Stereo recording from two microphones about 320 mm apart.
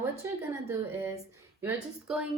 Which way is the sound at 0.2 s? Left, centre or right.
Centre.